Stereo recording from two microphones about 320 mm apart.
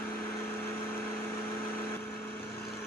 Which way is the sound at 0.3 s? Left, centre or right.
Centre.